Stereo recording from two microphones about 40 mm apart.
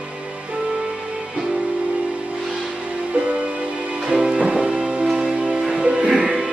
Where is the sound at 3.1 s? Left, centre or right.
Right.